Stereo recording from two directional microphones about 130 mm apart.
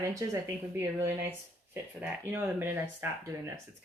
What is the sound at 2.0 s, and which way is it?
Speech, 15° right (ahead or behind).